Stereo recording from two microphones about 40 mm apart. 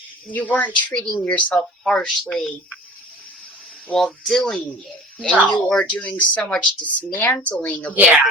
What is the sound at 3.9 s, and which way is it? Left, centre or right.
Speech, left.